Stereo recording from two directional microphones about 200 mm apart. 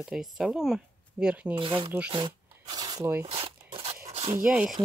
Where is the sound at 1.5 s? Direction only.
25° right (ahead or behind).